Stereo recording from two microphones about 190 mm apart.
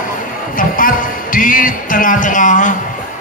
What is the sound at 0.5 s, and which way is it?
Speech, 45° left (ahead or behind).